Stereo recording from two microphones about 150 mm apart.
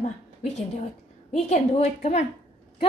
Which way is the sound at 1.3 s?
45° left (ahead or behind).